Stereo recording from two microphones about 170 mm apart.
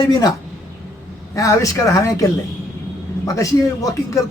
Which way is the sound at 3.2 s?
20° left (ahead or behind).